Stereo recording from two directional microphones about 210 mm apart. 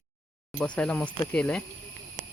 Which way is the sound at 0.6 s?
5° left (ahead or behind).